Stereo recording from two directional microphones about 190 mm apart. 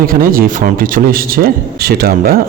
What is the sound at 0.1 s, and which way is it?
Speech, 50° right (ahead or behind).